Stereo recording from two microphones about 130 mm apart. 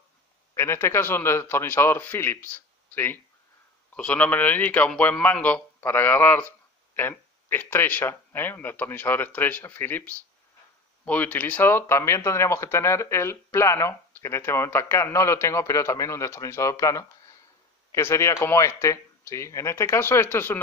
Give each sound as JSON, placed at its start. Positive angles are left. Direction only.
{"t": 0.6, "sound": "speech", "side_deg": 20}